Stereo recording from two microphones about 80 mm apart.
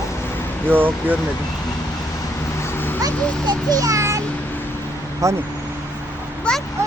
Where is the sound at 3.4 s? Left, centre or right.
Right.